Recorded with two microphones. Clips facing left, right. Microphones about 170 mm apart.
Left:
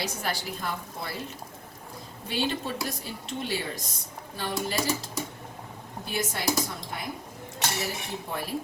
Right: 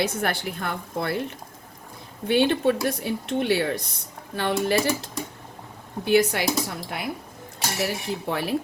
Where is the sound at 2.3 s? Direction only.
60° right (ahead or behind).